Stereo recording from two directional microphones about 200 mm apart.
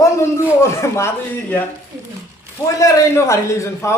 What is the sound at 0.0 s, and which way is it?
Speech, 15° left (ahead or behind).